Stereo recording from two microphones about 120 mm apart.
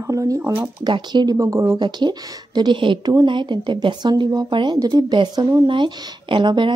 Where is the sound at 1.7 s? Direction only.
40° right (ahead or behind).